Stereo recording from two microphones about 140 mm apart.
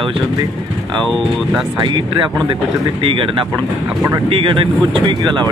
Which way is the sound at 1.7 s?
35° right (ahead or behind).